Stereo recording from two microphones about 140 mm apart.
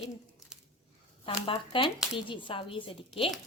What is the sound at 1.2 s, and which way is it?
Speech, 40° left (ahead or behind).